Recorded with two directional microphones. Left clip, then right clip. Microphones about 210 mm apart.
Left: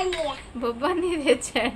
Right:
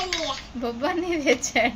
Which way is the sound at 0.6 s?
15° left (ahead or behind).